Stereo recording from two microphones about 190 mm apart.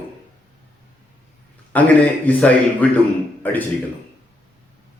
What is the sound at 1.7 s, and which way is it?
Speech, 10° left (ahead or behind).